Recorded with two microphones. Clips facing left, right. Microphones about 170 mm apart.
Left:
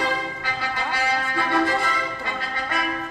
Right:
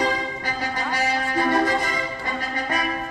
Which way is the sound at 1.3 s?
40° right (ahead or behind).